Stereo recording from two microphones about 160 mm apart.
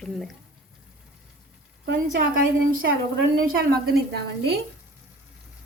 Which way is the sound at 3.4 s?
80° right.